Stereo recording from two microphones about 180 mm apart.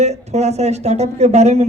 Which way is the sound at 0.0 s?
40° right (ahead or behind).